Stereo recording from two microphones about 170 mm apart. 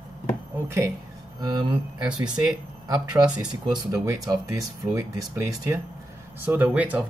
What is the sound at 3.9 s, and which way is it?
Speech, 20° right (ahead or behind).